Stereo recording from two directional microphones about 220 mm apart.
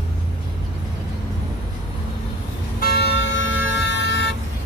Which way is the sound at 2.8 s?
45° left (ahead or behind).